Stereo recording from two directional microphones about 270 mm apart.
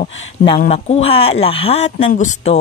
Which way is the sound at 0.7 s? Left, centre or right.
Left.